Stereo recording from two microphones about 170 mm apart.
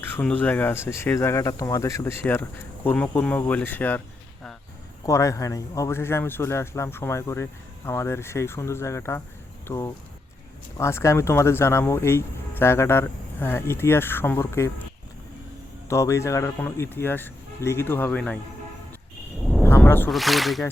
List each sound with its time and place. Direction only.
0.1 s speech: 10° left (ahead or behind)
5.0 s speech: 20° left (ahead or behind)
15.9 s speech: 15° left (ahead or behind)
19.4 s a sound: centre (ahead or behind)
19.6 s wild animals: 10° left (ahead or behind)
20.1 s speech: centre (ahead or behind)